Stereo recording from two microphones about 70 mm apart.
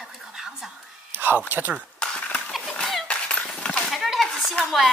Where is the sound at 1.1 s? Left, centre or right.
Right.